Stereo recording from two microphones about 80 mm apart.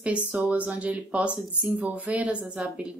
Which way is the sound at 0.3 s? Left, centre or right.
Centre.